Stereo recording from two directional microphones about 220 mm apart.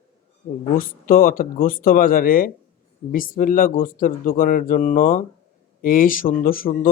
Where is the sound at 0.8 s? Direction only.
40° left (ahead or behind).